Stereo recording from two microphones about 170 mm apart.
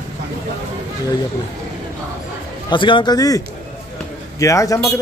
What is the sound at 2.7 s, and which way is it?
A man's voice, 30° left (ahead or behind).